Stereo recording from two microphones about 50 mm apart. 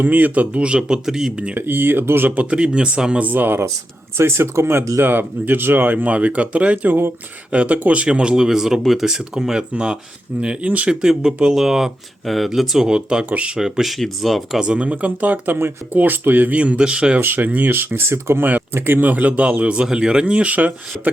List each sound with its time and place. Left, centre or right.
0.0 s speech: right; by 1.3 s centre
1.5 s speech: right
2.3 s speech: right
3.2 s speech: right
4.2 s speech: right
4.8 s speech: right
10.8 s speech: centre
12.9 s speech: centre
13.6 s speech: centre
14.6 s speech: right
16.6 s speech: right
17.2 s speech: right
18.1 s speech: right
18.7 s speech: right